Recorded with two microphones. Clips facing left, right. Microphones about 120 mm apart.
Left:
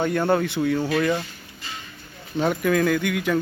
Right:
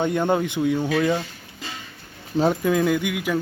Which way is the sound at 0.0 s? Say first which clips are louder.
Even; 20° right (ahead or behind).